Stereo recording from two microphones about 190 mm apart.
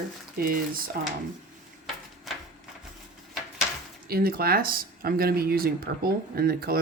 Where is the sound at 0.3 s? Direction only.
50° right (ahead or behind).